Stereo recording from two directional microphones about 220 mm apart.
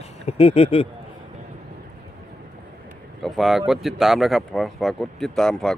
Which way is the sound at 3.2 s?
Centre (ahead or behind).